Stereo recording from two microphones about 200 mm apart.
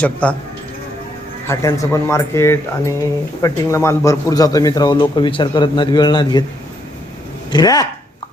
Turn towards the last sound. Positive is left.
turn(degrees=20)  # may be behind; listen again after turning